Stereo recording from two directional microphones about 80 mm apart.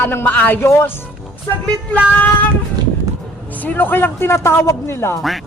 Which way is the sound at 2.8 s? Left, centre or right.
Right.